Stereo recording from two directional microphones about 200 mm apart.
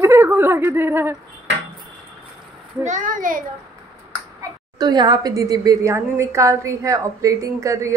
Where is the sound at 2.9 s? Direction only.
40° right (ahead or behind).